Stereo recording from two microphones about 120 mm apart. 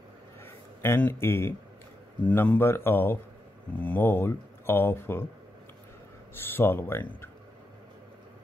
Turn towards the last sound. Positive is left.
turn(degrees=20)  # may be behind; listen again after turning